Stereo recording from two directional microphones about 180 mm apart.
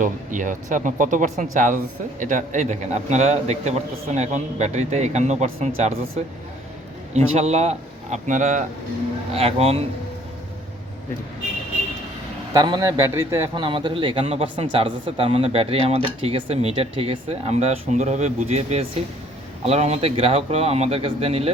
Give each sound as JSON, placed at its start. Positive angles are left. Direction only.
{"t": 0.0, "sound": "speech", "side_deg": -45}
{"t": 7.1, "sound": "speech", "side_deg": -35}
{"t": 9.3, "sound": "speech", "side_deg": -35}
{"t": 12.5, "sound": "speech", "side_deg": -25}
{"t": 13.7, "sound": "speech", "side_deg": -30}